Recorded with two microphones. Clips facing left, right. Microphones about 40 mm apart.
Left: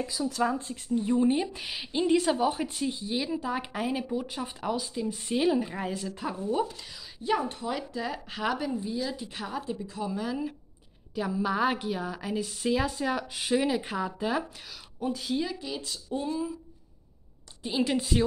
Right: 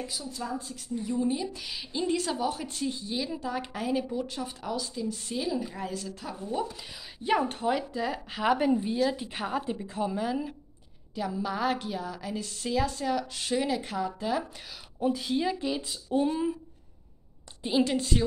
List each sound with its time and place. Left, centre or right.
0.3 s speech: left
0.6 s speech: left
2.1 s a woman's voice: centre
7.4 s speech: right
7.7 s speech: centre
8.5 s speech: right
10.0 s speech: centre
11.1 s a woman's voice: centre
15.0 s speech: centre
17.8 s a woman's voice: centre